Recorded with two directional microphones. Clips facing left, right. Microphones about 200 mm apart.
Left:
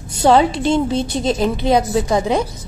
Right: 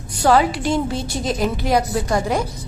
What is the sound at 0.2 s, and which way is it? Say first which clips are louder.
A woman's voice: left 3 dB; 25° left (ahead or behind).